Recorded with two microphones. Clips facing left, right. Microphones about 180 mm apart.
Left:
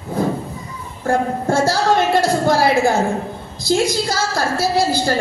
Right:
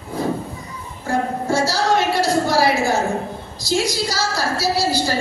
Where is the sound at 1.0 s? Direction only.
55° left (ahead or behind).